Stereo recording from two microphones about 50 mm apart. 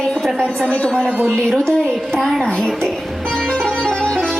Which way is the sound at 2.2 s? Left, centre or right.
Centre.